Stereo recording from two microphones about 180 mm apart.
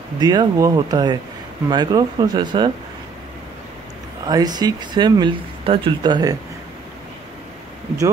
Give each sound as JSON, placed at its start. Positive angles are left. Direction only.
{"t": 0.2, "sound": "speech", "side_deg": -20}
{"t": 4.3, "sound": "speech", "side_deg": -20}